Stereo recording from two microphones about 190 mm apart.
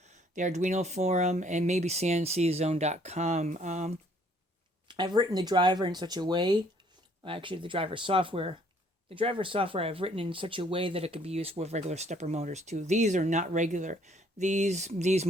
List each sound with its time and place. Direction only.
0.0 s speech: 40° right (ahead or behind)
4.9 s speech: 25° right (ahead or behind)